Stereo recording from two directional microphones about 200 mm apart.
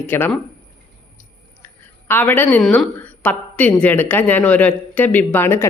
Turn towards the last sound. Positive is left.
turn(degrees=10)  # may be behind; listen again after turning